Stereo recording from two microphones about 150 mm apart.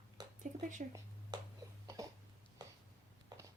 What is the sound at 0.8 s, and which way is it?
Speech, 55° right (ahead or behind).